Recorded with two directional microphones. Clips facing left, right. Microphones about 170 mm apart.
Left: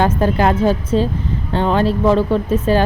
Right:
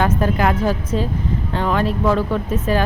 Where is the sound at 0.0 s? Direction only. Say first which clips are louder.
Left 3 dB; 30° left (ahead or behind).